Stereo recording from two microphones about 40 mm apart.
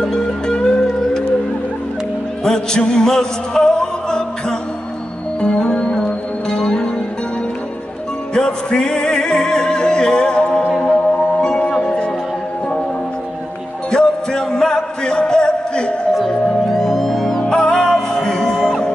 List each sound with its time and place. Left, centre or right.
0.0 s music: centre
2.4 s music: centre
8.4 s music: centre
11.8 s music: left
13.8 s music: centre
16.8 s music: centre
17.4 s music: centre